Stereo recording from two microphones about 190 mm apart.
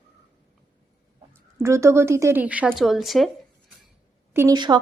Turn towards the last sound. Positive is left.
turn(degrees=-20)  # may be behind; listen again after turning